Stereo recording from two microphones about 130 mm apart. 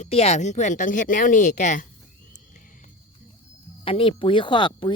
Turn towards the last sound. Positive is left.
turn(degrees=40)  # may be behind; listen again after turning